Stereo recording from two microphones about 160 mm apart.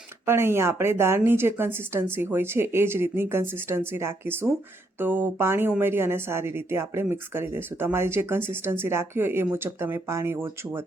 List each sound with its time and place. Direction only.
0.3 s speech: 15° right (ahead or behind)